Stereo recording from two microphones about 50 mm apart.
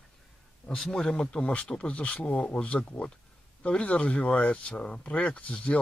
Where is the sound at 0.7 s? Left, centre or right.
Centre.